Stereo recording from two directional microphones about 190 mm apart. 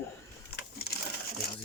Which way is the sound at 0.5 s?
55° left (ahead or behind).